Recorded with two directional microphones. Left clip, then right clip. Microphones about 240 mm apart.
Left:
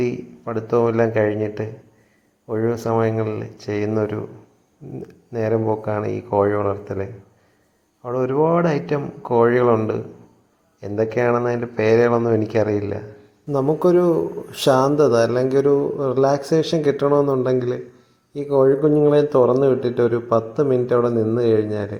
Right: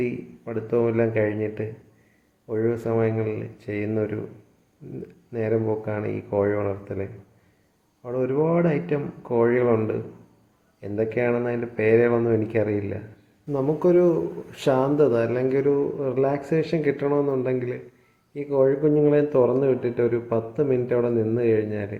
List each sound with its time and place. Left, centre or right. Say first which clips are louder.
0.0 s speech: left 5 dB; centre
5.3 s speech: left 4 dB; centre
13.5 s speech: left 4 dB; centre